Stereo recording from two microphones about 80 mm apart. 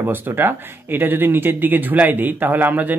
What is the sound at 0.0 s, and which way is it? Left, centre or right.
Speech, right.